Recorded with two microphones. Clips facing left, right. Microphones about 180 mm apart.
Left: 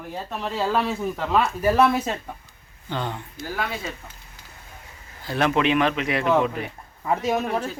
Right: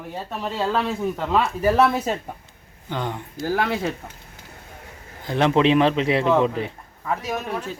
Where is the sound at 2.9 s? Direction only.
15° right (ahead or behind).